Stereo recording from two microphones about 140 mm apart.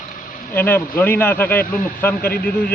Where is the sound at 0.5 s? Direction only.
15° left (ahead or behind).